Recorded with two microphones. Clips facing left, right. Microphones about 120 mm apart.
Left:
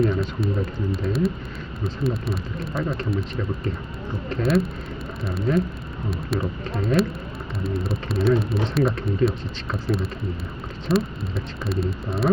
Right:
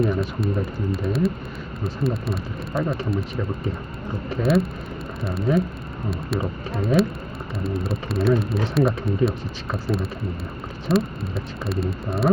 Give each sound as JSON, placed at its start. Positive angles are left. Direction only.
{"t": 0.2, "sound": "speech", "side_deg": 0}
{"t": 4.4, "sound": "speech", "side_deg": 0}